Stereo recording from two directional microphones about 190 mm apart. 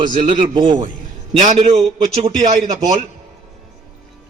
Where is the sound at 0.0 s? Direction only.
45° right (ahead or behind).